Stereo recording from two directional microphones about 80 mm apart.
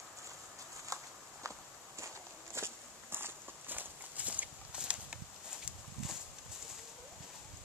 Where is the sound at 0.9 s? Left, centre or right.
Right.